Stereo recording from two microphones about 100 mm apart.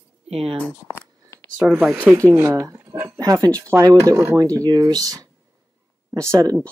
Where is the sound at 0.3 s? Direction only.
85° right.